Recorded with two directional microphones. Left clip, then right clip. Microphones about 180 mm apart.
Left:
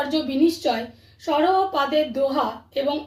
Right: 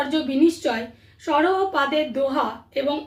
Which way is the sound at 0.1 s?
10° right (ahead or behind).